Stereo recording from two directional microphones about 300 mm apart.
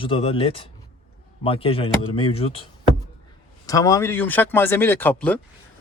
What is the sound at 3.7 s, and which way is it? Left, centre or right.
Speech, centre.